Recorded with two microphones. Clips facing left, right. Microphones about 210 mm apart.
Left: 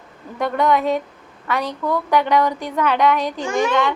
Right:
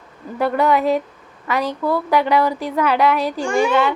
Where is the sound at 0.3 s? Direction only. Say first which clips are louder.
Right 1 dB; 5° right (ahead or behind).